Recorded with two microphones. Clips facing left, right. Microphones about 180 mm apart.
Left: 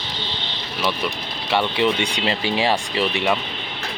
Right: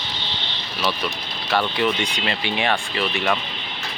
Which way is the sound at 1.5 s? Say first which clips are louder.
Left 1 dB; 25° left (ahead or behind).